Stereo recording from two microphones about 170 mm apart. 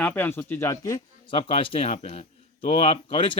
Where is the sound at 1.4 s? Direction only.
35° left (ahead or behind).